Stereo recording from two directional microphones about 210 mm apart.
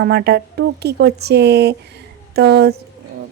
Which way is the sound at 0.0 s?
50° right (ahead or behind).